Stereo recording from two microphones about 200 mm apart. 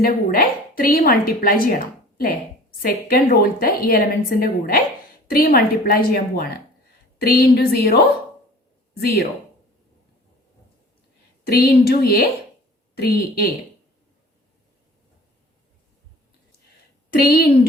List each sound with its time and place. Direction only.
0.0 s a woman's voice: 45° left (ahead or behind)
2.8 s a woman's voice: 45° left (ahead or behind)
11.4 s a woman's voice: 50° left (ahead or behind)
17.2 s a woman's voice: 50° left (ahead or behind)